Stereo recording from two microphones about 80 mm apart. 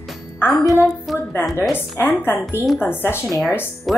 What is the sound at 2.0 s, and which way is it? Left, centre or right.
A woman's voice, left.